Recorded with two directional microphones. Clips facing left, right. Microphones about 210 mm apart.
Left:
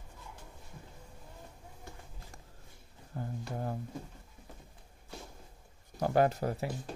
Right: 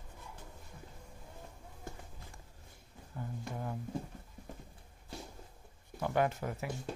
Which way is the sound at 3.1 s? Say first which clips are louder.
Left 3 dB; 40° left (ahead or behind).